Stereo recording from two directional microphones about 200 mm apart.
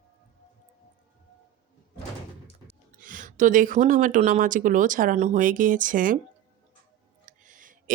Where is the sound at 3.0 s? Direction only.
40° right (ahead or behind).